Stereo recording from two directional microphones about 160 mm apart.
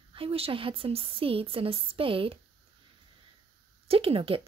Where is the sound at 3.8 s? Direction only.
35° right (ahead or behind).